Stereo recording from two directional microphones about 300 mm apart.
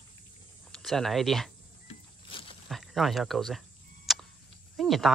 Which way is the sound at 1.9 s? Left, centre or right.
Centre.